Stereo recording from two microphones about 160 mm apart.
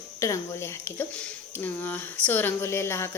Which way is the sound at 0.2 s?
20° left (ahead or behind).